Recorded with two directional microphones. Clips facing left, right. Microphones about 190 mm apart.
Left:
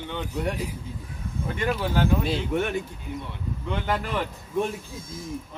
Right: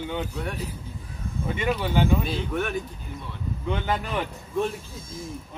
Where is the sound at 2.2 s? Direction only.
25° left (ahead or behind).